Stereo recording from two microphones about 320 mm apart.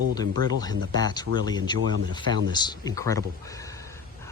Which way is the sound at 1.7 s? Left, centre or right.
Right.